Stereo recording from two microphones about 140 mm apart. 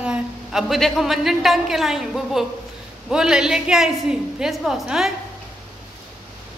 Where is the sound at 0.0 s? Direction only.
5° right (ahead or behind).